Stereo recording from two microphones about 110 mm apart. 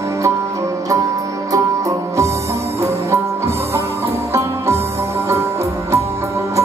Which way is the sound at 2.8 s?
25° right (ahead or behind).